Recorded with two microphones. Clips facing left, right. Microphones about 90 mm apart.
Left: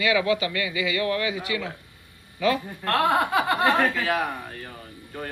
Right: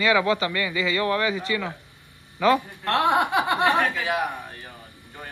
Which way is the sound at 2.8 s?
20° right (ahead or behind).